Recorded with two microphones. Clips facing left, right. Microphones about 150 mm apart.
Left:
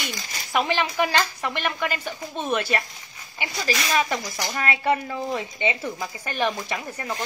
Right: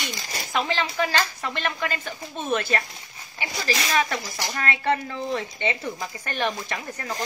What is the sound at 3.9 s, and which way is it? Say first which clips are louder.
A woman's voice: left 1 dB; 10° left (ahead or behind).